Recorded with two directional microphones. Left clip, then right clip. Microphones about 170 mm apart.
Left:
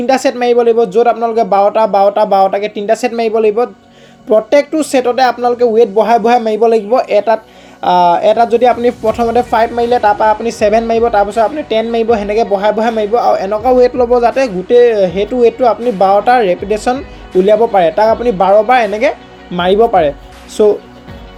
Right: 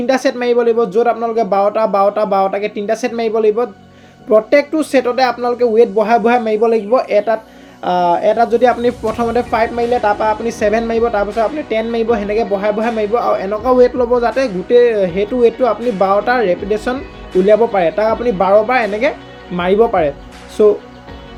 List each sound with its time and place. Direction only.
0.0 s speech: 35° left (ahead or behind)